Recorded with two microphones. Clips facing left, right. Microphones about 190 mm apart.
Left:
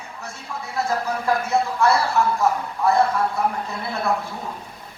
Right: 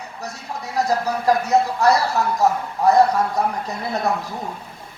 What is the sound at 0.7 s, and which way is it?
Speech, 40° right (ahead or behind).